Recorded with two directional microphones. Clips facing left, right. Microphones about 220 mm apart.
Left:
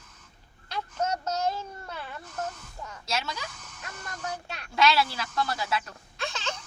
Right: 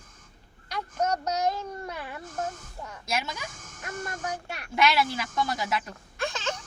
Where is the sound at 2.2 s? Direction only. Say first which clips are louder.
Right 2 dB; 50° right (ahead or behind).